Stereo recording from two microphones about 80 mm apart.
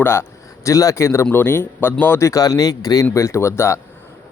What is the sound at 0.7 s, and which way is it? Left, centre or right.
Speech, left.